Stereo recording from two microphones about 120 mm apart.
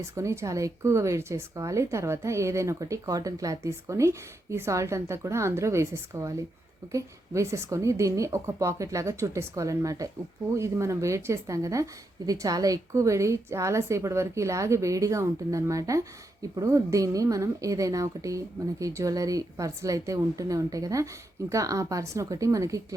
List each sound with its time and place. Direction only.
0.1 s a woman's voice: 25° right (ahead or behind)